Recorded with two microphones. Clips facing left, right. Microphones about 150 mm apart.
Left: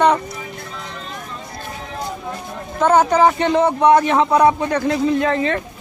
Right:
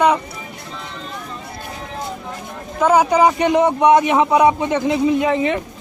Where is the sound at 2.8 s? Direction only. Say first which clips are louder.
Even; 10° right (ahead or behind).